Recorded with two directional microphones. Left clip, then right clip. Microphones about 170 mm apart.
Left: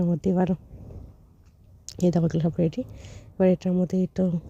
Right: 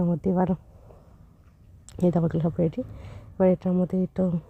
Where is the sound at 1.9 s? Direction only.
15° left (ahead or behind).